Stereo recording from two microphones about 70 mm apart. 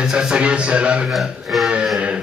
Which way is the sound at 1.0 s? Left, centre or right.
Centre.